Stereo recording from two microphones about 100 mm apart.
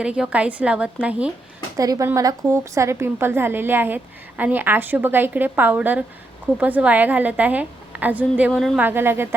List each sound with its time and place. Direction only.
0.0 s a woman's voice: 10° right (ahead or behind)
1.7 s a woman's voice: 35° right (ahead or behind); by 8.5 s 15° right (ahead or behind)
8.5 s speech: centre (ahead or behind)
8.8 s a woman's voice: 20° right (ahead or behind)